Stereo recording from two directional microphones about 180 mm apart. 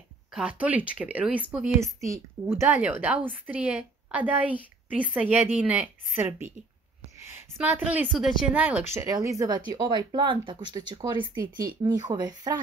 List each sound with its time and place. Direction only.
0.3 s a woman's voice: 5° right (ahead or behind); by 12.5 s 20° right (ahead or behind)